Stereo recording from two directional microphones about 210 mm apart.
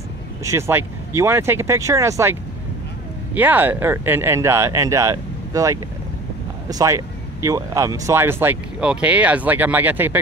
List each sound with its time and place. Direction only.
0.4 s speech: 15° right (ahead or behind)
3.3 s speech: 10° right (ahead or behind)